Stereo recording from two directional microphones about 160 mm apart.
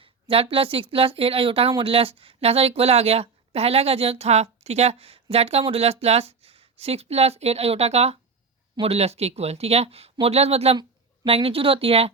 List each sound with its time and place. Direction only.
0.0 s speech: 35° right (ahead or behind)